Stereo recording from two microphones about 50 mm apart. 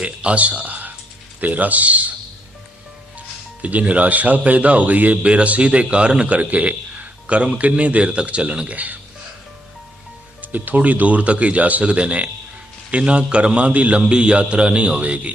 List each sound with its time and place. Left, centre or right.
0.0 s speech: right
3.2 s speech: right
10.4 s speech: right